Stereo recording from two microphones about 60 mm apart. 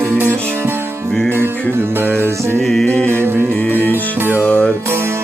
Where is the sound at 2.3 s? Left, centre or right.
Right.